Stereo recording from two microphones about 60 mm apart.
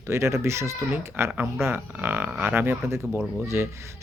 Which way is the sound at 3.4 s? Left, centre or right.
Right.